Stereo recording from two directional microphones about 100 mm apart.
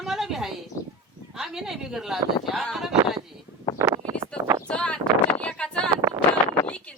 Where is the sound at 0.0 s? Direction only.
5° right (ahead or behind).